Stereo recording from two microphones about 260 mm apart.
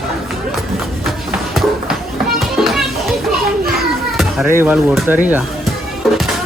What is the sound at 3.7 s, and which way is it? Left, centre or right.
Music, centre.